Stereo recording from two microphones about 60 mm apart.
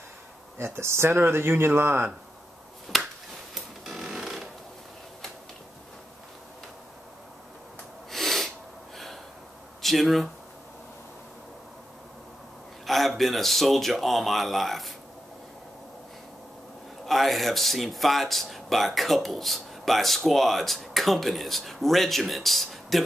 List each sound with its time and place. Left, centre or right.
0.7 s speech: right
2.9 s finger snapping: centre
3.5 s a sound: centre
8.1 s snort: centre
8.9 s gasp: centre
9.8 s speech: centre
12.8 s speech: centre
17.0 s speech: centre